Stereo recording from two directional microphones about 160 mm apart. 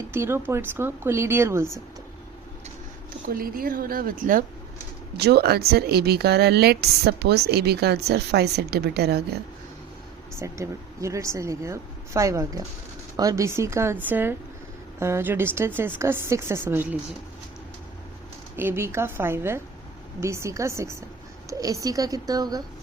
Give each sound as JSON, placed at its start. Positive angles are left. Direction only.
{"t": 0.1, "sound": "a woman's voice", "side_deg": -15}
{"t": 3.2, "sound": "a woman's voice", "side_deg": -60}
{"t": 5.1, "sound": "speech", "side_deg": -90}
{"t": 10.3, "sound": "a woman's voice", "side_deg": -20}
{"t": 18.5, "sound": "a woman's voice", "side_deg": -15}